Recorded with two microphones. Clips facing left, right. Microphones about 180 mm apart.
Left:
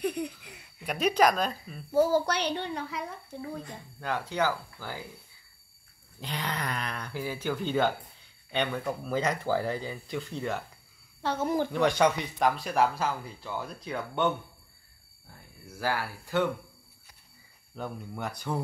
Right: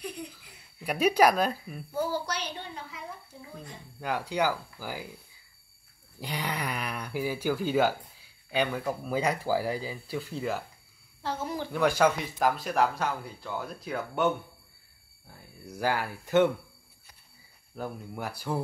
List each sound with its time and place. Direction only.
0.0 s baby laughter: 65° left (ahead or behind)
0.8 s speech: 10° right (ahead or behind)
1.9 s a child's voice: 40° left (ahead or behind)
2.2 s speech: 65° left (ahead or behind)
4.0 s speech: 10° right (ahead or behind)
6.1 s speech: 10° right (ahead or behind)
11.2 s speech: 50° left (ahead or behind)
11.7 s speech: 5° right (ahead or behind)
15.6 s speech: 15° right (ahead or behind)
17.7 s speech: 5° right (ahead or behind)